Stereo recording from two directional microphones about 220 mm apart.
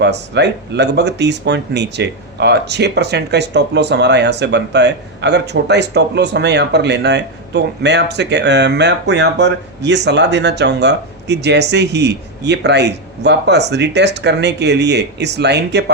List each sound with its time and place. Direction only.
0.0 s speech: 50° right (ahead or behind)